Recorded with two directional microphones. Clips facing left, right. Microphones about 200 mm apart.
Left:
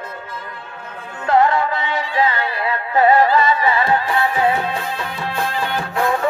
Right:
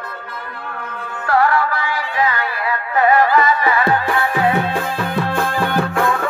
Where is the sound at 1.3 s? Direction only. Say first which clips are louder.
Left 1 dB; 20° left (ahead or behind).